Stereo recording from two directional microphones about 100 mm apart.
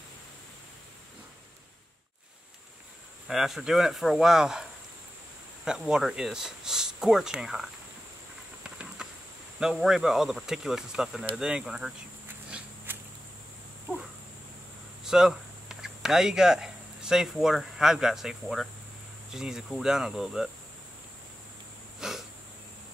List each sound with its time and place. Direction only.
3.3 s speech: 5° right (ahead or behind)
5.7 s speech: 5° right (ahead or behind)
8.6 s insect: 10° right (ahead or behind)
9.6 s speech: 5° right (ahead or behind)
12.4 s a sound: 10° right (ahead or behind)
15.0 s speech: 5° right (ahead or behind)
22.0 s a sound: 5° right (ahead or behind)